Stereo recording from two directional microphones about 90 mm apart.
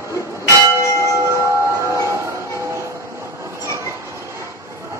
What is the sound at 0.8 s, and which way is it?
Church bell, 35° left (ahead or behind).